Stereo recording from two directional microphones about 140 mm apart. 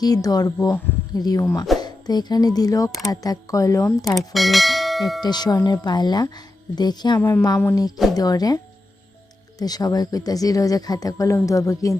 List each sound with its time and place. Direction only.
0.0 s a woman's voice: 25° left (ahead or behind)
4.4 s bell: centre (ahead or behind)
5.2 s a woman's voice: 30° left (ahead or behind)
7.2 s a woman's voice: 15° left (ahead or behind)
9.6 s a woman's voice: 25° left (ahead or behind)